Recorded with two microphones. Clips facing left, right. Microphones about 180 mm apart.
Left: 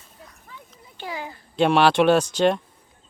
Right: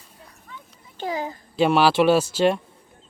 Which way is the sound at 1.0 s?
40° right (ahead or behind).